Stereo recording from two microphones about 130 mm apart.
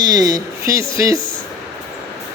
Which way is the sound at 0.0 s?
30° right (ahead or behind).